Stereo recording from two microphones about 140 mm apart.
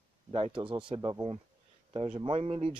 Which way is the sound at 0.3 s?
40° right (ahead or behind).